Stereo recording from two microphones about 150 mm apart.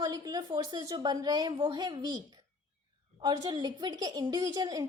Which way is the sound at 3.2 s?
25° right (ahead or behind).